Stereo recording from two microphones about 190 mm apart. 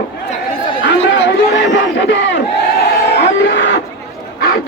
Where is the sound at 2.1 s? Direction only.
70° left (ahead or behind).